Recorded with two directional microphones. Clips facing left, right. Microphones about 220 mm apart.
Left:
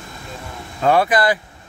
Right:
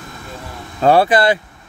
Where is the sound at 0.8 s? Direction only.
30° right (ahead or behind).